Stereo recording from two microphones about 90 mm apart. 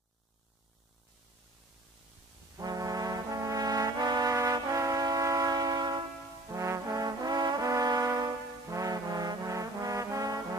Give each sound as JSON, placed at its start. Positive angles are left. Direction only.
{"t": 2.5, "sound": "brass instrument", "side_deg": -40}
{"t": 6.5, "sound": "brass instrument", "side_deg": -40}